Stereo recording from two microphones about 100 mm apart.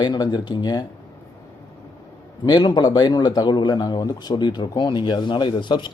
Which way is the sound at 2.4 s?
45° left (ahead or behind).